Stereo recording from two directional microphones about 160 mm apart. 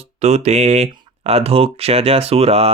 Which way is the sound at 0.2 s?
45° right (ahead or behind).